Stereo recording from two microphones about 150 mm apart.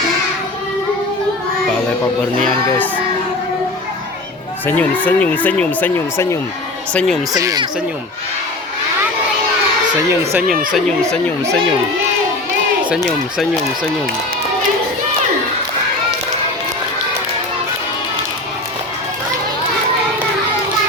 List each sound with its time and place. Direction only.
4.6 s speech: 10° left (ahead or behind)
7.3 s speech: 25° right (ahead or behind)
10.4 s speech: 65° right (ahead or behind)
10.7 s speech: centre (ahead or behind)
12.9 s speech: centre (ahead or behind)